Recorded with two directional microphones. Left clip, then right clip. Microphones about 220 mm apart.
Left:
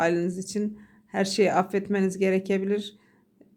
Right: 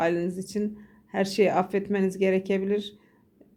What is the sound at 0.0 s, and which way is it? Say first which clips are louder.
Speech: left 1 dB; 5° left (ahead or behind).